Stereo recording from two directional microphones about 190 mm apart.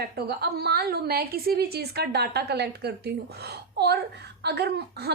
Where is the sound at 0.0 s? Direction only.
55° right (ahead or behind).